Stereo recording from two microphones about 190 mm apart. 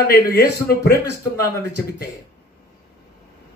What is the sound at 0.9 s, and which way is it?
Speech, 15° left (ahead or behind).